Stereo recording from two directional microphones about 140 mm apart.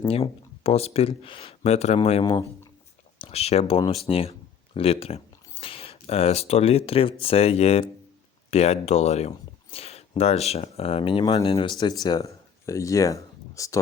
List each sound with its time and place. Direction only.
0.1 s speech: 45° left (ahead or behind); by 13.7 s 20° left (ahead or behind)